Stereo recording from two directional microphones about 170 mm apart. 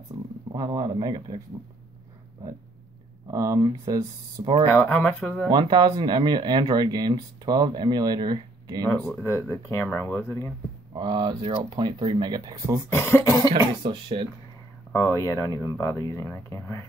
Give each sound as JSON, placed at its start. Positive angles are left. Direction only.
{"t": 0.1, "sound": "a sound", "side_deg": -15}
{"t": 0.5, "sound": "speech", "side_deg": -20}
{"t": 3.3, "sound": "speech", "side_deg": -20}
{"t": 4.6, "sound": "speech", "side_deg": 10}
{"t": 5.5, "sound": "speech", "side_deg": -25}
{"t": 9.2, "sound": "speech", "side_deg": 15}
{"t": 11.0, "sound": "speech", "side_deg": -25}
{"t": 12.9, "sound": "speech", "side_deg": 15}
{"t": 13.6, "sound": "speech", "side_deg": -30}
{"t": 14.9, "sound": "speech", "side_deg": 15}